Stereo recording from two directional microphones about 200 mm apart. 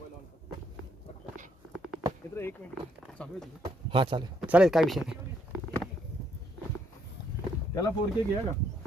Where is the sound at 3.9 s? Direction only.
25° right (ahead or behind).